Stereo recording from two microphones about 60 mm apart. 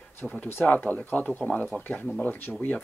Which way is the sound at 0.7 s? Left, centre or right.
Left.